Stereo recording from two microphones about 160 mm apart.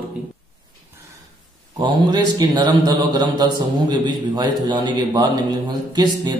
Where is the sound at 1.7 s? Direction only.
30° right (ahead or behind).